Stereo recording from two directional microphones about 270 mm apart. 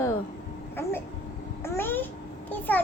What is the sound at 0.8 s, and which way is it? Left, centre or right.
Speech, centre.